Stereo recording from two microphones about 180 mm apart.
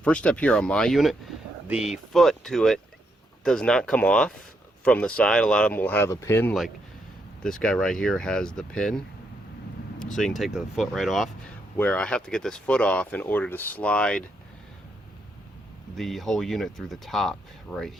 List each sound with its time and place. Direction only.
0.0 s speech: 5° left (ahead or behind)
7.4 s speech: 5° left (ahead or behind)
10.2 s speech: centre (ahead or behind)
16.0 s speech: centre (ahead or behind)